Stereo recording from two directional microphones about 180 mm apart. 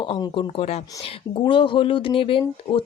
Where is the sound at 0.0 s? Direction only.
25° left (ahead or behind).